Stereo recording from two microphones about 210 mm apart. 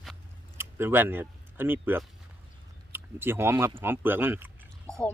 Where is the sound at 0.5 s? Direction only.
10° right (ahead or behind).